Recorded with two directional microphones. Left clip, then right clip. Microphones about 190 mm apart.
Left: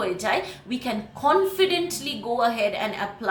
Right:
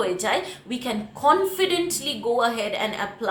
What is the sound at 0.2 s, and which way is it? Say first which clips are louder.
A woman's voice: even; 20° right (ahead or behind).